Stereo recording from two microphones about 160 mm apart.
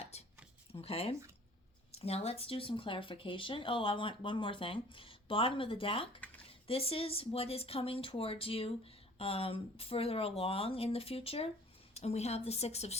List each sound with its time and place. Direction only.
0.0 s a sound: 40° left (ahead or behind)
1.9 s speech: 40° left (ahead or behind)
6.1 s dishes: 10° left (ahead or behind)
6.5 s a woman's voice: 35° left (ahead or behind)